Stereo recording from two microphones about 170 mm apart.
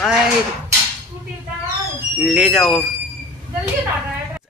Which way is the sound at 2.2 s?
5° right (ahead or behind).